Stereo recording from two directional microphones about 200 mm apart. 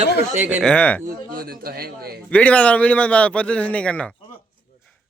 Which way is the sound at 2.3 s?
5° left (ahead or behind).